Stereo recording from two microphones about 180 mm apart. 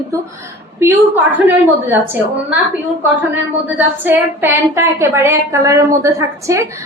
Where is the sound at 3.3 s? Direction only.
10° right (ahead or behind).